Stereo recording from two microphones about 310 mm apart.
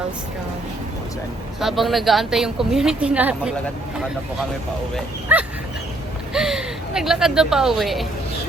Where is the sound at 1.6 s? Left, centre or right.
Centre.